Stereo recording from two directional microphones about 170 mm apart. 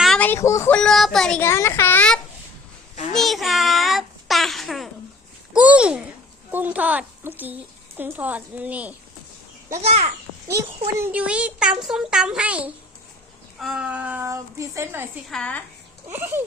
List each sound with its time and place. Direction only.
0.0 s a sound: 5° left (ahead or behind)
0.8 s speech: centre (ahead or behind)
1.4 s a child's voice: 15° left (ahead or behind); by 9.0 s 10° right (ahead or behind)
9.7 s a child's voice: 40° right (ahead or behind)
10.5 s speech: 15° right (ahead or behind)
15.3 s a child's voice: 5° left (ahead or behind)
16.0 s speech: 15° right (ahead or behind)